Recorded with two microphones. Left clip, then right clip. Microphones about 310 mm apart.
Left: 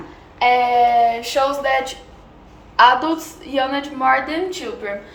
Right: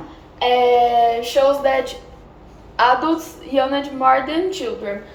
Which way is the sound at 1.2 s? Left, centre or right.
Centre.